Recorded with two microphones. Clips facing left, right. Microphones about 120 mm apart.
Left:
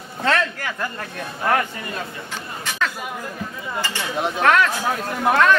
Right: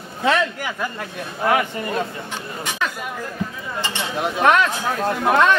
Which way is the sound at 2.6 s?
15° right (ahead or behind).